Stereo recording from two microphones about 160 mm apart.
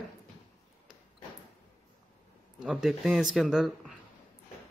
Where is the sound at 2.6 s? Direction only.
5° right (ahead or behind).